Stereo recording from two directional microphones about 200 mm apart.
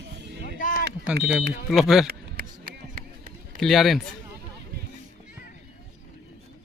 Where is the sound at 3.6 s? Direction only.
Centre (ahead or behind).